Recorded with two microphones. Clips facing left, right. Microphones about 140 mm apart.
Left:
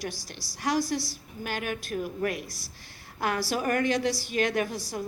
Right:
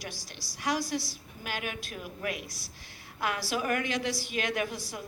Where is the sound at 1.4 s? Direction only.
40° left (ahead or behind).